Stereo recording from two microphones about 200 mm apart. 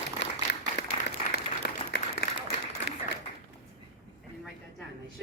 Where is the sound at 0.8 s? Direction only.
60° left (ahead or behind).